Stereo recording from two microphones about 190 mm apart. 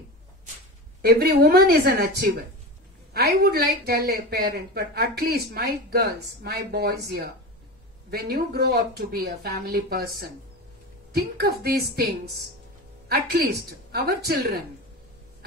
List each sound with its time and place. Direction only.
1.0 s speech: 55° right (ahead or behind)